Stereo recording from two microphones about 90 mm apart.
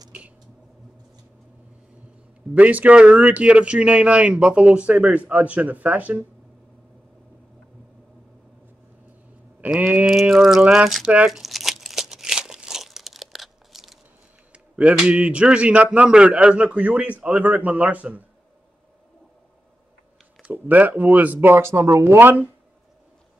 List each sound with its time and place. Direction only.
2.5 s speech: 15° right (ahead or behind)
9.8 s speech: 20° right (ahead or behind)
10.0 s a sound: 5° right (ahead or behind)
11.1 s crumpling: 10° right (ahead or behind)
14.5 s speech: 15° right (ahead or behind)
20.5 s speech: 20° right (ahead or behind)